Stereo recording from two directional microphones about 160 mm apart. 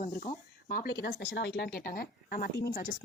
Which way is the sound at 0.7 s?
80° left.